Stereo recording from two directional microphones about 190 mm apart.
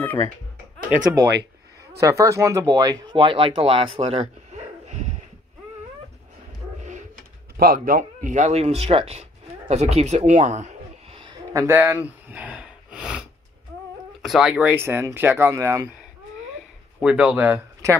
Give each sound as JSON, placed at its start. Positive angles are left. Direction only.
{"t": 0.0, "sound": "speech", "side_deg": 10}
{"t": 2.0, "sound": "speech", "side_deg": -15}
{"t": 6.8, "sound": "dog", "side_deg": -40}
{"t": 7.5, "sound": "speech", "side_deg": -50}
{"t": 9.7, "sound": "a sound", "side_deg": -35}
{"t": 11.5, "sound": "a sound", "side_deg": -10}
{"t": 14.2, "sound": "speech", "side_deg": 0}
{"t": 17.0, "sound": "speech", "side_deg": -5}